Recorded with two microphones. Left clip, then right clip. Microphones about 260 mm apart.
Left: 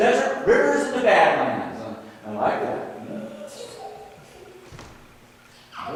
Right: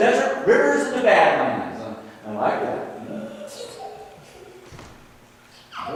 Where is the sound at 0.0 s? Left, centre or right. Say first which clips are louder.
Right 1 dB; centre.